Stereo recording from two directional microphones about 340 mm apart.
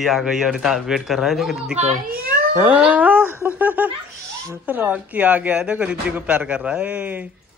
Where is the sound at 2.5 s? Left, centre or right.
Centre.